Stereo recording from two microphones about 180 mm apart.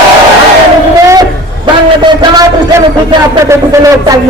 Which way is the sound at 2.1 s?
20° right (ahead or behind).